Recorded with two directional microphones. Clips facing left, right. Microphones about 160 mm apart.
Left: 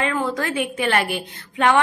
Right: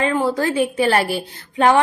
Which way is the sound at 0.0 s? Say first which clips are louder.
Right 4 dB; 30° right (ahead or behind).